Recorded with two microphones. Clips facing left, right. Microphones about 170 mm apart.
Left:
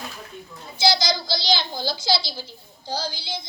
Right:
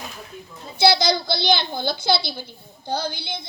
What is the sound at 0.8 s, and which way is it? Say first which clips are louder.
A child's voice: right 4 dB; 60° right (ahead or behind).